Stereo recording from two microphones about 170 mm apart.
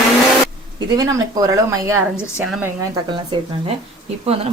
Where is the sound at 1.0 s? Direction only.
20° right (ahead or behind).